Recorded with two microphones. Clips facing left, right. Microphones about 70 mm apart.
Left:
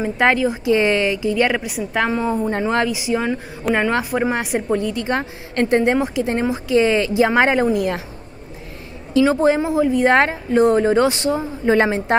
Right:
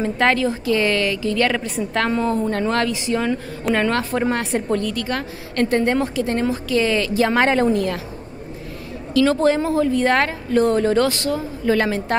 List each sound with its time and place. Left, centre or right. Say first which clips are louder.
0.0 s a woman's voice: left 1 dB; centre
9.1 s speech: left 1 dB; centre